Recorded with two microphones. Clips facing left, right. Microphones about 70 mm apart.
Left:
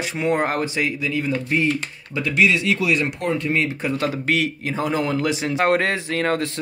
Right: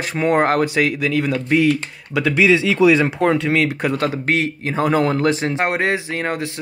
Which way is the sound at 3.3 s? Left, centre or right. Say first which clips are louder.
Right 4 dB; right.